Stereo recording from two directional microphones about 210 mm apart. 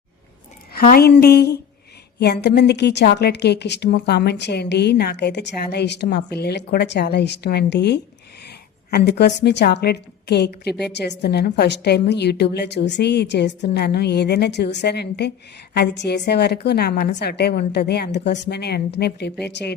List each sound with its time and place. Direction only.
0.7 s a woman's voice: 45° left (ahead or behind)